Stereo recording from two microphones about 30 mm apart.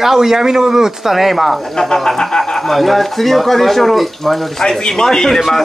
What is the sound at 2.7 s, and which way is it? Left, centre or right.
A man's voice, centre.